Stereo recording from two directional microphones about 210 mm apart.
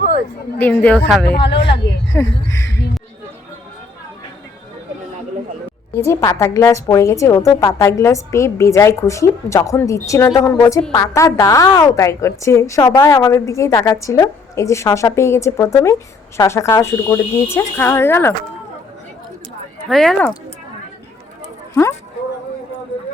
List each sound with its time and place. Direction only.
0.6 s a woman's voice: 10° left (ahead or behind)
1.4 s speech: 55° left (ahead or behind)
2.1 s a woman's voice: 15° left (ahead or behind)
2.6 s speech: 55° left (ahead or behind)
6.1 s a woman's voice: 15° left (ahead or behind)
19.9 s a woman's voice: centre (ahead or behind)